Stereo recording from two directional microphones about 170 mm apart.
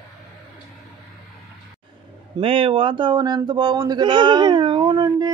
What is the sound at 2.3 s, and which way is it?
Speech, 30° right (ahead or behind).